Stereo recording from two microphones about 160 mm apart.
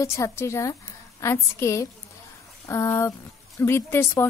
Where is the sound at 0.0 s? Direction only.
20° left (ahead or behind).